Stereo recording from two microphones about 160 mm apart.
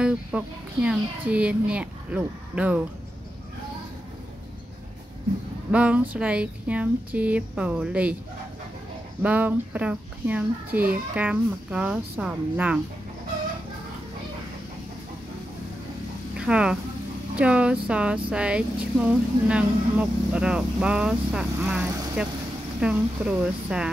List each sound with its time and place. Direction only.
0.0 s a woman's voice: 5° right (ahead or behind)
5.7 s a woman's voice: 10° right (ahead or behind)
9.2 s a woman's voice: 10° right (ahead or behind)
16.3 s a woman's voice: 5° right (ahead or behind)